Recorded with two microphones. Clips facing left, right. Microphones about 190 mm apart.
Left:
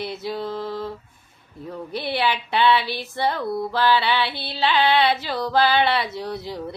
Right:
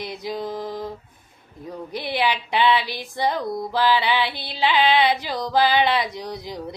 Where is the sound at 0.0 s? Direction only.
15° right (ahead or behind).